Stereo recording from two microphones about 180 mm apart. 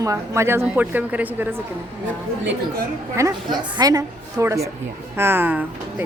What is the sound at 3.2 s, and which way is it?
A woman's voice, 15° right (ahead or behind).